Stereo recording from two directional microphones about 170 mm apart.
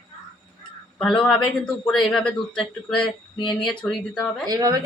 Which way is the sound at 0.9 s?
5° left (ahead or behind).